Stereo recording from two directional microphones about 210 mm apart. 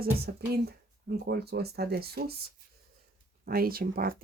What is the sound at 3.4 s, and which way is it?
Speech, 45° right (ahead or behind).